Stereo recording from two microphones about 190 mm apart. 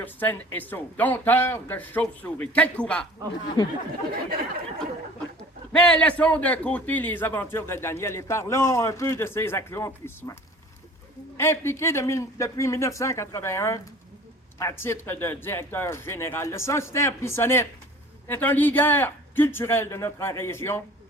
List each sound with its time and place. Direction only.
0.0 s a man's voice: 10° left (ahead or behind)
3.6 s speech: 20° left (ahead or behind)
5.7 s a man's voice: 5° left (ahead or behind)
11.3 s a man's voice: 15° left (ahead or behind)